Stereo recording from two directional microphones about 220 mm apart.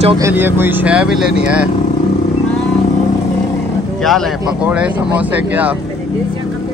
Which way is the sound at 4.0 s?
Centre (ahead or behind).